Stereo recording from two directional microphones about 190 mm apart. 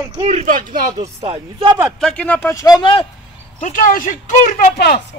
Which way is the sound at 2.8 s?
25° left (ahead or behind).